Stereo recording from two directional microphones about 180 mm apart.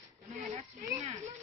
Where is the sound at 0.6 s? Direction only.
40° right (ahead or behind).